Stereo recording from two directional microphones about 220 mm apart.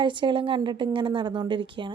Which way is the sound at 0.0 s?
20° right (ahead or behind).